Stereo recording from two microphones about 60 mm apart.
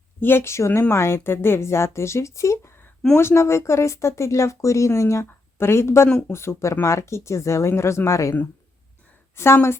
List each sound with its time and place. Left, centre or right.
0.2 s speech: left
3.2 s speech: left
5.2 s a woman's voice: left